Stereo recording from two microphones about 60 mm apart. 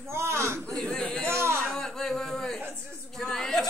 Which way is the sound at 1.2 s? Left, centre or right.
Right.